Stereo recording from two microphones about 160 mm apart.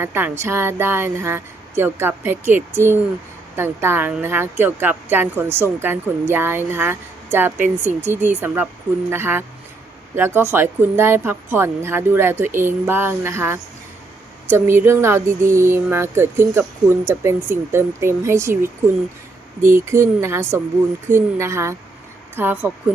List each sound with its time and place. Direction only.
0.0 s a woman's voice: 15° right (ahead or behind)